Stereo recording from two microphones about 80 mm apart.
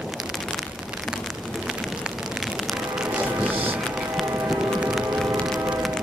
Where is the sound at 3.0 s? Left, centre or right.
Right.